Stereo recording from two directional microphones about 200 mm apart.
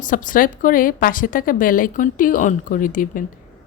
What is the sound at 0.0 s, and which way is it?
A woman's voice, 40° left (ahead or behind).